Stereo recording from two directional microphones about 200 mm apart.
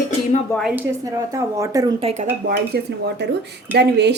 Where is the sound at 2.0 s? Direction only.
30° right (ahead or behind).